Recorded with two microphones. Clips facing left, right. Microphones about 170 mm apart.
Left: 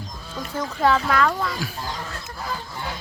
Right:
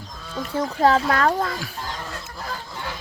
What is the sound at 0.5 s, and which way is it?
Speech, 35° right (ahead or behind).